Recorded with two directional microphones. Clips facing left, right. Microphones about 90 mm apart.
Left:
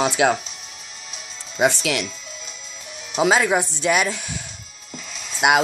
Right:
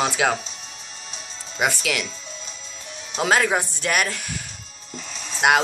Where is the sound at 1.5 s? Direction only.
20° left (ahead or behind).